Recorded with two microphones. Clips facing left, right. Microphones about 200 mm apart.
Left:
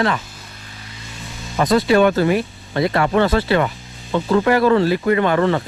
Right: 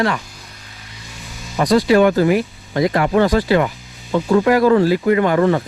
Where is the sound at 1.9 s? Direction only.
20° right (ahead or behind).